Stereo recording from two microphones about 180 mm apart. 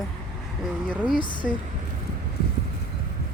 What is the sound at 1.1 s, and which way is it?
Speech, 25° left (ahead or behind).